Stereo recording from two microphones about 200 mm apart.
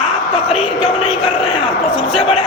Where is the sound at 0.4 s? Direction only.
30° left (ahead or behind).